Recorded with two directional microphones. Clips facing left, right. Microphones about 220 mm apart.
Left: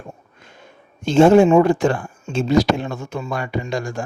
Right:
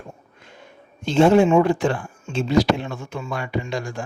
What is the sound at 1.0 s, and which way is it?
Speech, 45° left (ahead or behind).